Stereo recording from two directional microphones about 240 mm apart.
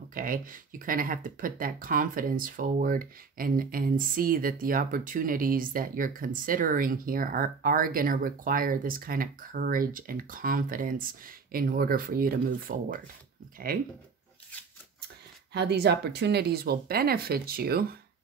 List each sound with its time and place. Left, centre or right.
0.1 s speech: right
15.5 s speech: right